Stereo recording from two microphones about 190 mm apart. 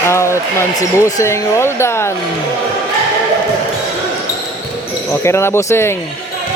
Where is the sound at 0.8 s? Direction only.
20° left (ahead or behind).